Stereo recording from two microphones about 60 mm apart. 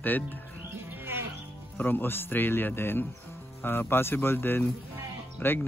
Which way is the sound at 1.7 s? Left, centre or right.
Left.